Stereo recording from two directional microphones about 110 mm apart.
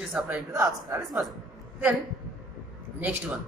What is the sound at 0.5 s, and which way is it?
Speech, 30° right (ahead or behind).